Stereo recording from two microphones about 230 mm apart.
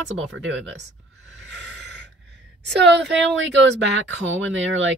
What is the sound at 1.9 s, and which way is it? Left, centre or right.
Gasp, right.